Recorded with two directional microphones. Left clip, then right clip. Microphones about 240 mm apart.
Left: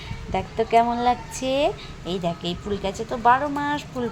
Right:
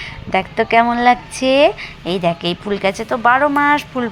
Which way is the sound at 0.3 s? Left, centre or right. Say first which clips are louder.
Right 7 dB; centre.